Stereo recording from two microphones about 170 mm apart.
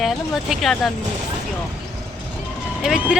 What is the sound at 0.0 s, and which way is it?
Speech, centre (ahead or behind).